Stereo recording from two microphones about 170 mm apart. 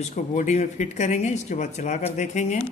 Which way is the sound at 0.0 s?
50° left (ahead or behind).